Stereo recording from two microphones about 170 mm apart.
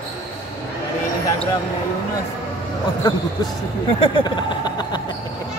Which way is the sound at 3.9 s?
30° left (ahead or behind).